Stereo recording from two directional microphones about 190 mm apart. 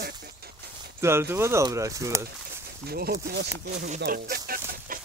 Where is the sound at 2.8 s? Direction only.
55° right (ahead or behind).